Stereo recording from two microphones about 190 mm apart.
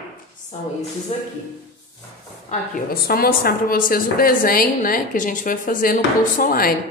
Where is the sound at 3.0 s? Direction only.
50° left (ahead or behind).